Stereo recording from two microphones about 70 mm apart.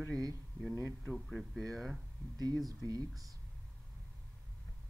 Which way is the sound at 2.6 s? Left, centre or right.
Right.